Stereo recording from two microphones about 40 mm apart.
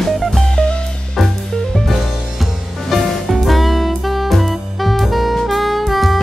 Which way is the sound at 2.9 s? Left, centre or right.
Centre.